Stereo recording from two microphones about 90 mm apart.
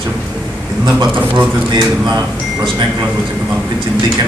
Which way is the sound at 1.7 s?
50° right (ahead or behind).